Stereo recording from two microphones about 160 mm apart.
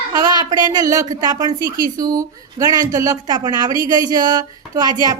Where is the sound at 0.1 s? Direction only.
25° right (ahead or behind).